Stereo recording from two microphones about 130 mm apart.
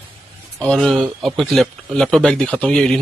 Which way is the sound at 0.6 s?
5° left (ahead or behind).